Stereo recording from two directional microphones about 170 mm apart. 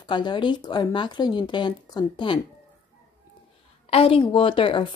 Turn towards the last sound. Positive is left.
turn(degrees=30)  # may be behind; listen again after turning